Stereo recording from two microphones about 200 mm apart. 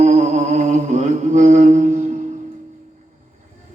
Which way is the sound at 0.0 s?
35° right (ahead or behind).